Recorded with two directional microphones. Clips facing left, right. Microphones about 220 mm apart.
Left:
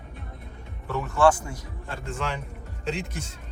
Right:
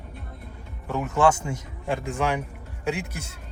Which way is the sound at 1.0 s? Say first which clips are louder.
Left 1 dB; 20° right (ahead or behind).